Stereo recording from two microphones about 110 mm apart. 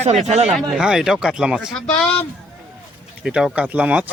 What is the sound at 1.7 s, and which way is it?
Speech, 10° left (ahead or behind).